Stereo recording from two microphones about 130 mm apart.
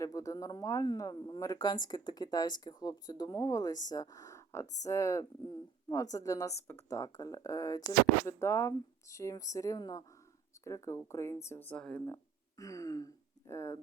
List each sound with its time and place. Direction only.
0.0 s speech: 25° left (ahead or behind)
12.0 s speech: 25° left (ahead or behind)